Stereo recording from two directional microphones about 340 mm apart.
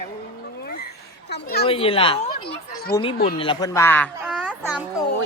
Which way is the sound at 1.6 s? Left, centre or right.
Centre.